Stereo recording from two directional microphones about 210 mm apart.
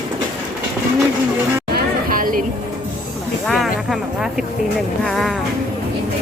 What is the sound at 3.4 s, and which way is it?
Speech, centre (ahead or behind).